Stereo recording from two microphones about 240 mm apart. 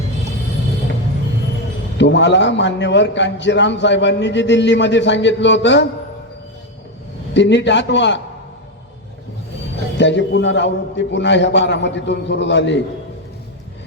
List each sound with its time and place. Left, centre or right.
2.0 s a man's voice: left
7.3 s a man's voice: left
10.0 s a man's voice: left